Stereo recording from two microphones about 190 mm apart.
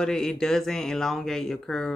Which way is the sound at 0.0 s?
5° left (ahead or behind).